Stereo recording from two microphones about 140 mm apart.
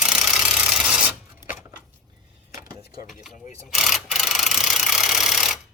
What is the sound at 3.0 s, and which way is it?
Mechanisms, centre (ahead or behind).